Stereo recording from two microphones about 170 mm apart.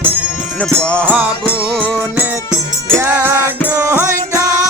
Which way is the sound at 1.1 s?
10° right (ahead or behind).